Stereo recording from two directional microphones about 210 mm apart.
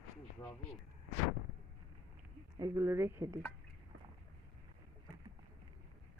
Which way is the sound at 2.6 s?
15° right (ahead or behind).